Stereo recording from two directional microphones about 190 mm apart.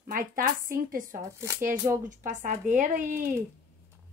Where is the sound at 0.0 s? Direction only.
50° right (ahead or behind).